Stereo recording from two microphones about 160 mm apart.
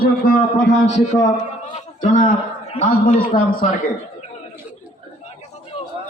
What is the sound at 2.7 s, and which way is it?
Speech, 40° left (ahead or behind).